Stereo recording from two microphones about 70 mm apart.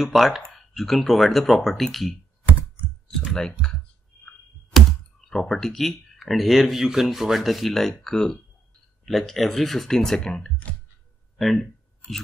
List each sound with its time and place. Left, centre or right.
0.0 s speech: centre
3.3 s speech: centre
4.7 s computer keyboard: centre
5.3 s speech: centre